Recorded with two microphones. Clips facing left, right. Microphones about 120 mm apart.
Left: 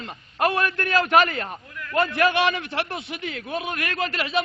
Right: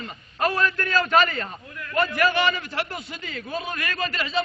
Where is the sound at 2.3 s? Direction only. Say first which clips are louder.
Left 1 dB; 75° left (ahead or behind).